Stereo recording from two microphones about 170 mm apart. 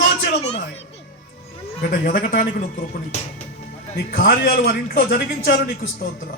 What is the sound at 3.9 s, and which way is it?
A man's voice, 60° left (ahead or behind).